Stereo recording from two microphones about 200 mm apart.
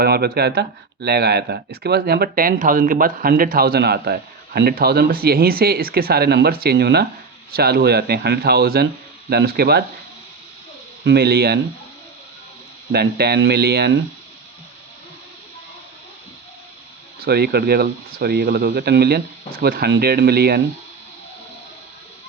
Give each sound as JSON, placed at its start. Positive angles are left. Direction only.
{"t": 0.0, "sound": "speech", "side_deg": -50}
{"t": 11.0, "sound": "speech", "side_deg": -55}
{"t": 12.9, "sound": "speech", "side_deg": -55}
{"t": 17.2, "sound": "speech", "side_deg": -50}